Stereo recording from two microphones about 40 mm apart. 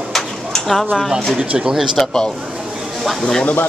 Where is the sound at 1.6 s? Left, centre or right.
Centre.